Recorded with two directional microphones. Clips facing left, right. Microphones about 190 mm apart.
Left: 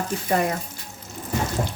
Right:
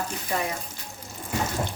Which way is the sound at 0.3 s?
50° left (ahead or behind).